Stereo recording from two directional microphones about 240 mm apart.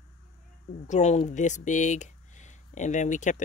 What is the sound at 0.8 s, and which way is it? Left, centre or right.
Speech, left.